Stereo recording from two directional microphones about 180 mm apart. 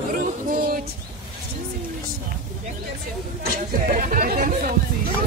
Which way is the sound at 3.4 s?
50° right (ahead or behind).